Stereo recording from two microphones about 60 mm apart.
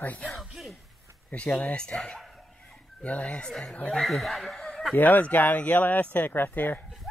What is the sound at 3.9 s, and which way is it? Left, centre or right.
Speech, centre.